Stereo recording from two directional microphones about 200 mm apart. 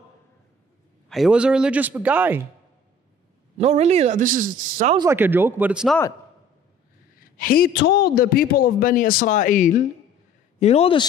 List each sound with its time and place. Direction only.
1.0 s a man's voice: centre (ahead or behind)
3.5 s speech: 35° right (ahead or behind)
4.9 s a man's voice: 15° right (ahead or behind)
7.3 s a man's voice: 45° left (ahead or behind); by 11.1 s 30° left (ahead or behind)